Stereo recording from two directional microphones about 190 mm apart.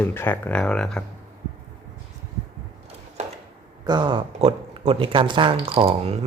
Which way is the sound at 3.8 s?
25° right (ahead or behind).